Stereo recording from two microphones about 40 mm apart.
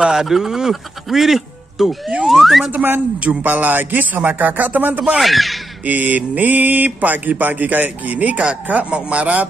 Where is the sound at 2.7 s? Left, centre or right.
Right.